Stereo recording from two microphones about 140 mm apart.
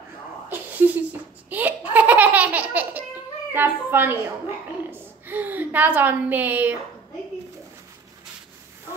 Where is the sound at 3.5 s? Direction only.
15° right (ahead or behind).